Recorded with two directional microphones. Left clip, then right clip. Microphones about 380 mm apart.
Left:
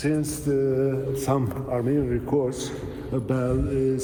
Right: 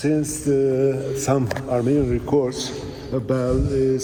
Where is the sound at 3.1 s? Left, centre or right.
Centre.